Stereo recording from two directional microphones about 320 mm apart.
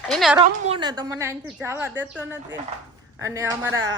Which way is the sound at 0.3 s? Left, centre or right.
Centre.